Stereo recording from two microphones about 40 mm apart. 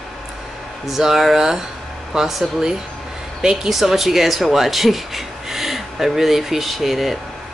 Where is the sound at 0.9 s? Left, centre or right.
Centre.